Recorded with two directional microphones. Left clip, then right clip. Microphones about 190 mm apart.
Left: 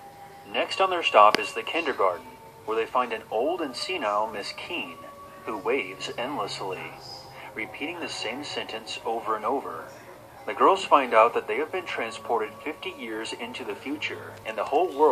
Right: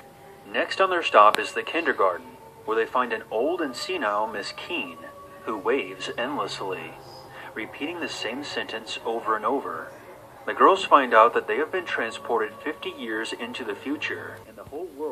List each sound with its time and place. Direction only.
0.5 s speech: 45° right (ahead or behind)